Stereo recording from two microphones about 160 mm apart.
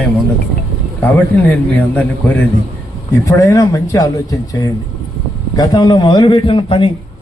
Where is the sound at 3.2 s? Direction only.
20° left (ahead or behind).